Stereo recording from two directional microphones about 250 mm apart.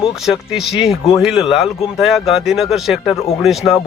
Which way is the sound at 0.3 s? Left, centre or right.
Centre.